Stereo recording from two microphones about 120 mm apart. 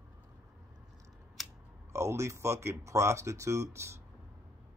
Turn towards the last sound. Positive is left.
turn(degrees=-20)  # may be behind; listen again after turning